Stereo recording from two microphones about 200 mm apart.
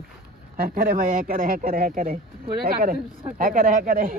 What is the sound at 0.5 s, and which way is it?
Speech, 45° right (ahead or behind).